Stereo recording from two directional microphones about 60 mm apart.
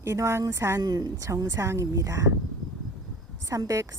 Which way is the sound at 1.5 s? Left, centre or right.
Right.